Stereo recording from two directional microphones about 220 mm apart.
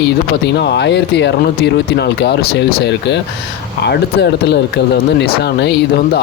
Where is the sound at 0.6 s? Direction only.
50° left (ahead or behind).